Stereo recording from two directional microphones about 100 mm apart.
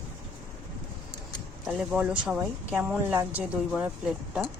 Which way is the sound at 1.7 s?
10° right (ahead or behind).